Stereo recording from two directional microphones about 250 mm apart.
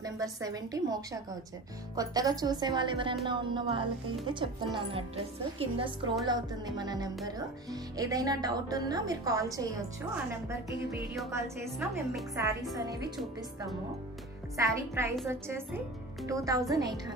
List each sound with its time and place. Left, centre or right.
0.0 s speech: centre
11.2 s speech: centre
14.6 s speech: centre